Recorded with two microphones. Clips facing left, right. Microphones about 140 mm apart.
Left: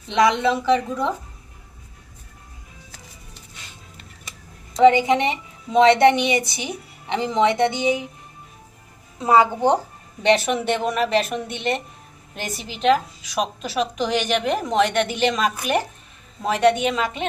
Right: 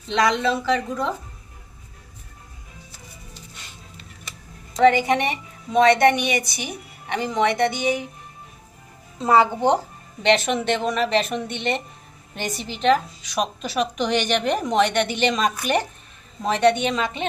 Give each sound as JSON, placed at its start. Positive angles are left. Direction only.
{"t": 0.1, "sound": "a woman's voice", "side_deg": 20}
{"t": 4.8, "sound": "a woman's voice", "side_deg": 20}
{"t": 9.2, "sound": "a woman's voice", "side_deg": 10}